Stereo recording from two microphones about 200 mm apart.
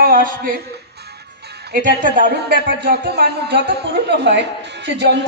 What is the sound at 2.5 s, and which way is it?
Speech, 55° right (ahead or behind).